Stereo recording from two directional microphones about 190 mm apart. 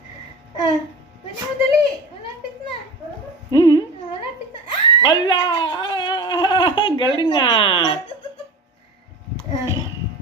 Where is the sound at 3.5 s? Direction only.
20° left (ahead or behind).